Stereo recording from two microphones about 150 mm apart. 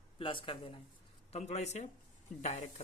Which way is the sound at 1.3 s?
45° left (ahead or behind).